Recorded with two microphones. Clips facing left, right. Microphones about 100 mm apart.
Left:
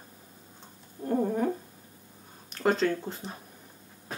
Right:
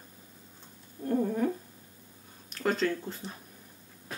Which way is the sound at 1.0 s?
20° left (ahead or behind).